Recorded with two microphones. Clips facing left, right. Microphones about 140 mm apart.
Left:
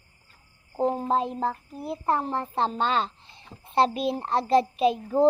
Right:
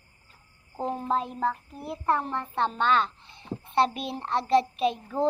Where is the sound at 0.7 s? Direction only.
35° left (ahead or behind).